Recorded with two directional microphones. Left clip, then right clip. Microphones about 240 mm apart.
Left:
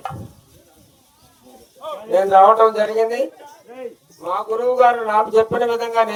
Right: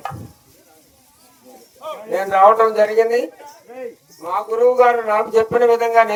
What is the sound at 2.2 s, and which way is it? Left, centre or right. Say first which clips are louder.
Speech: left 1 dB; right.